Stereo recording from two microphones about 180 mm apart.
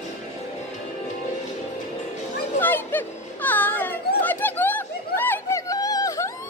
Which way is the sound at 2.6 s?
10° left (ahead or behind).